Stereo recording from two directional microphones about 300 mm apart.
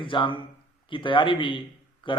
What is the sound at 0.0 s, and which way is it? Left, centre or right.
A man's voice, centre.